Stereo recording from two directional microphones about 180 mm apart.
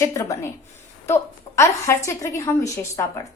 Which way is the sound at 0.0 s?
15° left (ahead or behind).